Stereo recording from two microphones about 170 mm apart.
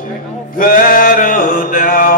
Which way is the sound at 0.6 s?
55° left (ahead or behind).